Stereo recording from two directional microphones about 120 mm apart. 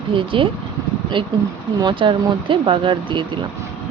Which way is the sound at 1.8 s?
45° right (ahead or behind).